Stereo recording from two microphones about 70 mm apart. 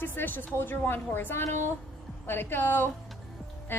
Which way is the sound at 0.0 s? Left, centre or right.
Left.